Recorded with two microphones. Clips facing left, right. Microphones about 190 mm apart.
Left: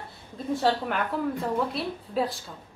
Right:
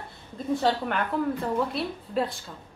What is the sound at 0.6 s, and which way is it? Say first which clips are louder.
A woman's voice: left 1 dB; centre (ahead or behind).